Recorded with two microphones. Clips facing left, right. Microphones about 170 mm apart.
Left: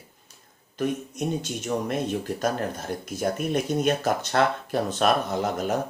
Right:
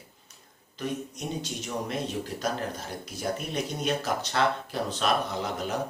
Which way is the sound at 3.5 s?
50° left (ahead or behind).